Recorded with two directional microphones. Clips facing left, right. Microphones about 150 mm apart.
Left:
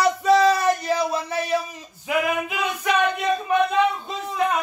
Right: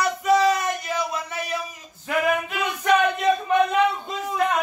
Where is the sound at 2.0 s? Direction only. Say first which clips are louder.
Even; 10° left (ahead or behind).